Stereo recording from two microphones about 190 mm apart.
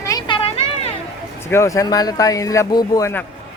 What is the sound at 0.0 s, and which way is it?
Children playing, 20° left (ahead or behind).